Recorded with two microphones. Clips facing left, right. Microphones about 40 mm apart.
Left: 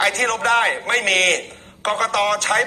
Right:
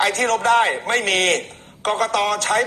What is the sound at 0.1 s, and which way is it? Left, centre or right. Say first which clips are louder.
A man's voice: right 1 dB; left.